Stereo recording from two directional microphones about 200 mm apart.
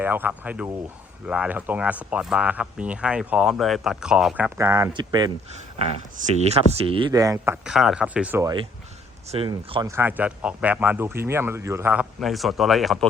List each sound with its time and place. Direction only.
0.0 s speech: 10° right (ahead or behind)
9.3 s speech: 30° right (ahead or behind)
9.9 s speech: 10° right (ahead or behind)